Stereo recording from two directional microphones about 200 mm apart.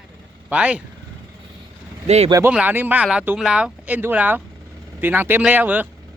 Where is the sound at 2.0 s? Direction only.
35° right (ahead or behind).